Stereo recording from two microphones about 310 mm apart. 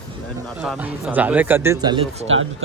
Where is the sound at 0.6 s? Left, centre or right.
Centre.